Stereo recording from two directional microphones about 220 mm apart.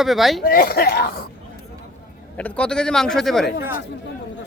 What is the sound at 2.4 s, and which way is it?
Speech, 5° left (ahead or behind).